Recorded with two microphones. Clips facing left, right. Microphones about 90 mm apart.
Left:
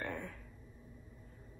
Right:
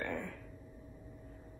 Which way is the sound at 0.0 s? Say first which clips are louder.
Right 2 dB; 10° left (ahead or behind).